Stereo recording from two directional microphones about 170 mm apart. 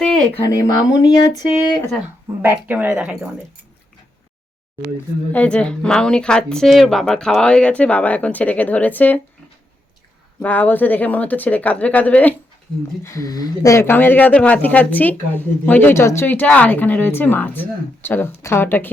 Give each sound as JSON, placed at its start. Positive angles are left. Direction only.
{"t": 0.3, "sound": "speech", "side_deg": 20}
{"t": 2.4, "sound": "speech", "side_deg": -10}
{"t": 5.3, "sound": "speech", "side_deg": 10}
{"t": 10.4, "sound": "speech", "side_deg": 10}